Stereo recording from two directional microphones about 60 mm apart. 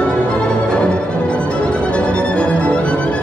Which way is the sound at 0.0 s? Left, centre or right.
Centre.